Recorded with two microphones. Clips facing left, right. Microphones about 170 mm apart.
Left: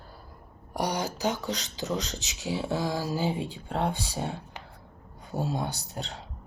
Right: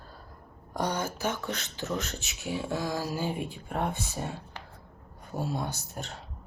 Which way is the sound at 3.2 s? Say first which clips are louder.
Left 3 dB; 90° left.